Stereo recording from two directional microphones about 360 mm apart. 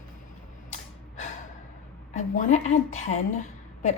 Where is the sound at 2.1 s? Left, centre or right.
Centre.